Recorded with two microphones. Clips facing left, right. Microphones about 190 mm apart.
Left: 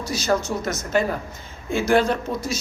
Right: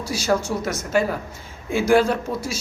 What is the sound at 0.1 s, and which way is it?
Speech, 10° right (ahead or behind).